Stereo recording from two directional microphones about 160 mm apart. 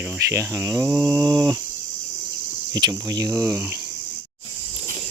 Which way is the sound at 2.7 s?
25° right (ahead or behind).